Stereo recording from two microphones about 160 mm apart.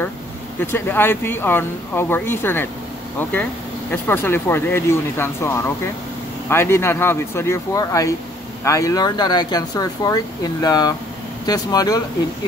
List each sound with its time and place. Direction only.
0.6 s speech: 15° left (ahead or behind)